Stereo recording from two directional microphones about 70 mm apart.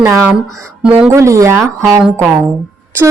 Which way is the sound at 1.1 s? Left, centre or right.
Right.